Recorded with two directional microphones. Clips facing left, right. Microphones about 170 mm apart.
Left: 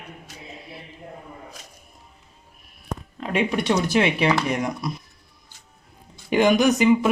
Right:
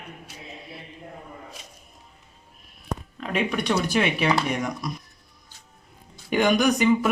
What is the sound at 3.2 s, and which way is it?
Speech, 30° left (ahead or behind).